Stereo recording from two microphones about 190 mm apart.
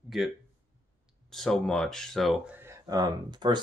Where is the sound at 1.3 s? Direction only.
Centre (ahead or behind).